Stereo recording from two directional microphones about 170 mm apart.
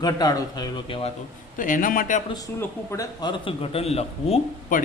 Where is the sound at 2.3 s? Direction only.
20° left (ahead or behind).